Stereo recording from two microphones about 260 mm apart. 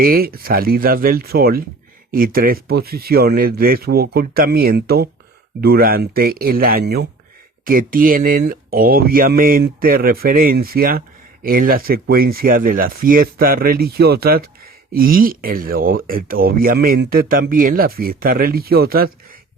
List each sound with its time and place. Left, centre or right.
0.0 s speech: right